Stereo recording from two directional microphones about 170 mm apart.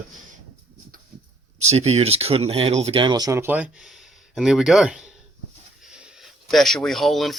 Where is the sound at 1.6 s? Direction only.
40° right (ahead or behind); by 5.1 s 5° right (ahead or behind).